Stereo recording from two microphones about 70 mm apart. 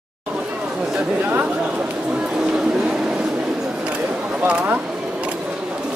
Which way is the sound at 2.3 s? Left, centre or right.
Centre.